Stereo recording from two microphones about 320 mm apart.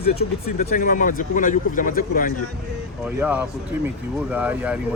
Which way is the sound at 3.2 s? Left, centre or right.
Centre.